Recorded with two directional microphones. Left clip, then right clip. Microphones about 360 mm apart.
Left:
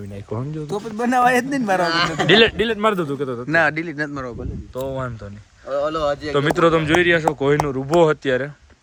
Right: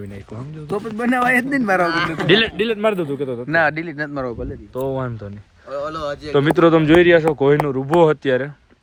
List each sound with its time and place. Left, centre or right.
0.7 s a man's voice: centre
1.9 s speech: left
2.2 s a man's voice: centre
5.6 s speech: left
6.3 s a man's voice: centre